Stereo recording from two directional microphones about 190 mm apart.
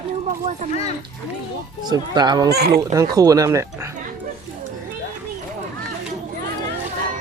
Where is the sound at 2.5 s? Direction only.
55° right (ahead or behind).